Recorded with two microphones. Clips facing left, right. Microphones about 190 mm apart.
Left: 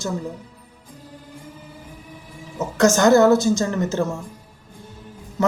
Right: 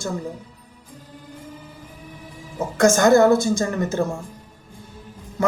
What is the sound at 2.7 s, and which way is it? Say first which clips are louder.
A man's voice: even; 55° right (ahead or behind).